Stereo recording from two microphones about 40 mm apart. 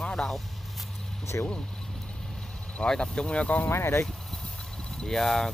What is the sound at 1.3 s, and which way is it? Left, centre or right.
Speech, left.